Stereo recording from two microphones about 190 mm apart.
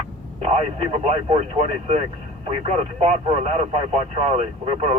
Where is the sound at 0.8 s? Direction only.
30° right (ahead or behind).